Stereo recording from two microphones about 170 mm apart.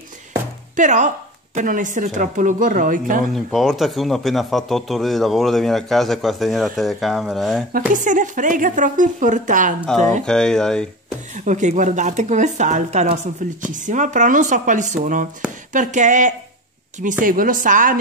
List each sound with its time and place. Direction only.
0.7 s speech: 45° right (ahead or behind)
3.3 s speech: centre (ahead or behind)
7.9 s speech: 50° right (ahead or behind)
10.2 s speech: 5° left (ahead or behind)
11.3 s speech: 45° right (ahead or behind)